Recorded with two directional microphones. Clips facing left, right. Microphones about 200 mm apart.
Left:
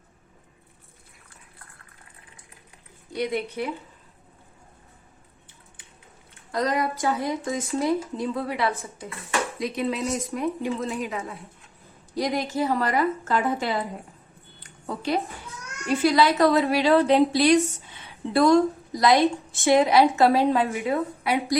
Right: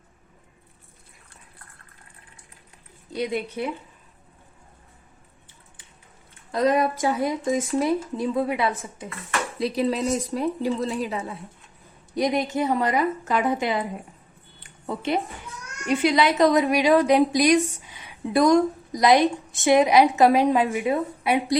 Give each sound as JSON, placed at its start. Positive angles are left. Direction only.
{"t": 6.5, "sound": "a woman's voice", "side_deg": -20}
{"t": 9.6, "sound": "speech", "side_deg": -35}
{"t": 12.1, "sound": "a woman's voice", "side_deg": -20}
{"t": 14.6, "sound": "a sound", "side_deg": -25}
{"t": 15.9, "sound": "a woman's voice", "side_deg": -20}